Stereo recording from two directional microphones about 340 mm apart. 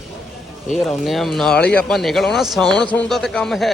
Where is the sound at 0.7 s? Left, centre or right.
Centre.